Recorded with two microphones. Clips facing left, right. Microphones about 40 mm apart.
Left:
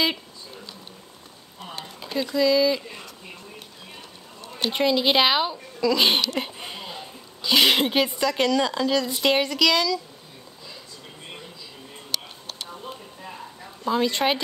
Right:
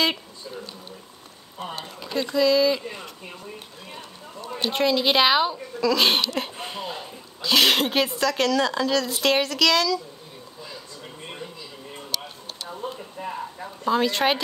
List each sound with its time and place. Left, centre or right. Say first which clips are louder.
2.3 s a woman's voice: right 1 dB; centre
4.6 s a woman's voice: even; centre
13.2 s a sound: right 7 dB; right
13.8 s speech: right 1 dB; centre